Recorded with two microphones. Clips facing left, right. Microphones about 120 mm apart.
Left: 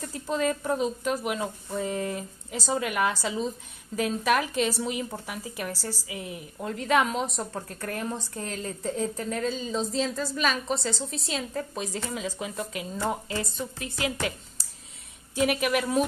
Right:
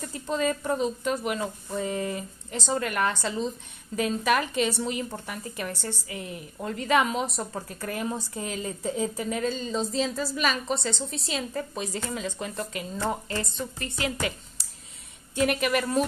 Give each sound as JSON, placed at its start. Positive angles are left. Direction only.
{"t": 0.0, "sound": "speech", "side_deg": 0}
{"t": 14.6, "sound": "a sound", "side_deg": 0}
{"t": 15.3, "sound": "speech", "side_deg": 0}